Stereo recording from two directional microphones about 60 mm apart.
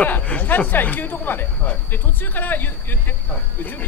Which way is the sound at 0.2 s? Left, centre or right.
Centre.